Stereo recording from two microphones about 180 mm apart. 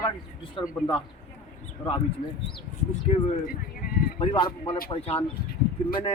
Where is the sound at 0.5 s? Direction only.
25° left (ahead or behind).